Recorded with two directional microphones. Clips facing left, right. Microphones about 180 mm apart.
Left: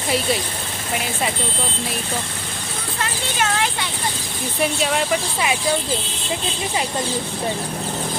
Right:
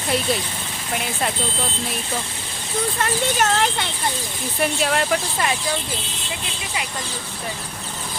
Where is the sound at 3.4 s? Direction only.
45° right (ahead or behind).